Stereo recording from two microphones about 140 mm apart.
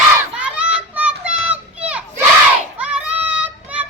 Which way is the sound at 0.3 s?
10° right (ahead or behind).